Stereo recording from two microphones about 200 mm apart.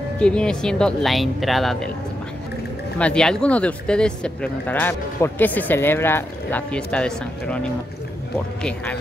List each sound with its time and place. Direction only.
0.2 s speech: 5° left (ahead or behind)
3.0 s speech: 5° left (ahead or behind)